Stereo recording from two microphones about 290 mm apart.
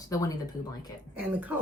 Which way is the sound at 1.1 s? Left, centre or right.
Centre.